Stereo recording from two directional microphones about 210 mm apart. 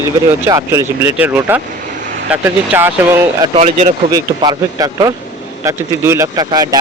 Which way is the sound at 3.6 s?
30° right (ahead or behind).